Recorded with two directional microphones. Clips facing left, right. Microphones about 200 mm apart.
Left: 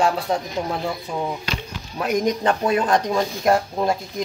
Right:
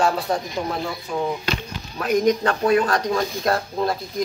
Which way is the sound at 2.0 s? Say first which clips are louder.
Right 1 dB; 20° left (ahead or behind).